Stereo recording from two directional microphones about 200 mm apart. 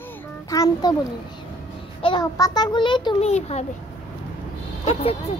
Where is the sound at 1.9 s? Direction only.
25° left (ahead or behind).